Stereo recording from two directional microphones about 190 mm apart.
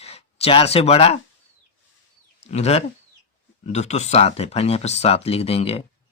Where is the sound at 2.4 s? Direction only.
35° left (ahead or behind).